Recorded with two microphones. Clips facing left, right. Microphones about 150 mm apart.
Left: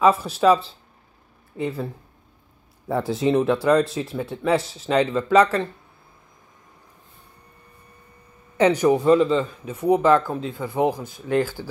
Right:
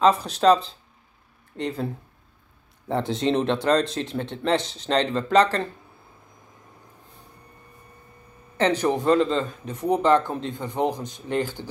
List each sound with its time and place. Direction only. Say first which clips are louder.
0.0 s speech: left 1 dB; 5° left (ahead or behind)
2.9 s speech: left 2 dB; 5° left (ahead or behind)
8.5 s speech: left 4 dB; 10° left (ahead or behind)
11.3 s speech: left 4 dB; 20° right (ahead or behind)